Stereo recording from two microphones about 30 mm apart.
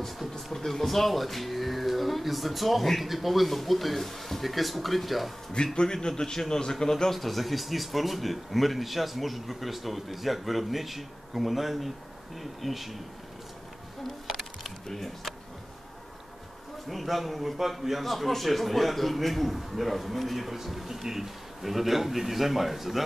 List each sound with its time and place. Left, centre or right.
0.5 s speech: centre
5.6 s a man's voice: left
6.0 s a man's voice: centre
7.1 s speech: centre
14.2 s a sound: centre
14.9 s a man's voice: centre
16.9 s speech: centre